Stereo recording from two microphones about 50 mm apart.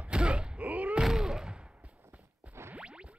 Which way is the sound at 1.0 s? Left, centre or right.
Centre.